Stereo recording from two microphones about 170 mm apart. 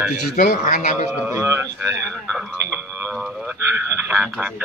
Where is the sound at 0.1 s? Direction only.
50° left (ahead or behind).